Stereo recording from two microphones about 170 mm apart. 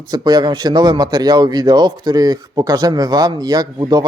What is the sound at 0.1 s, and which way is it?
Speech, 25° right (ahead or behind).